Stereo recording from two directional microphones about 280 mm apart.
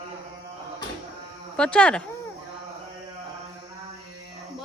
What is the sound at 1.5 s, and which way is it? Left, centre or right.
Speech, centre.